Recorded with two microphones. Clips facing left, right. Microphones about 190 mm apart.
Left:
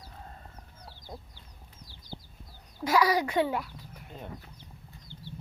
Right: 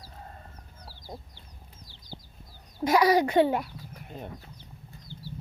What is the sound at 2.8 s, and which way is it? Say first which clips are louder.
Speech: right 4 dB; 20° right (ahead or behind).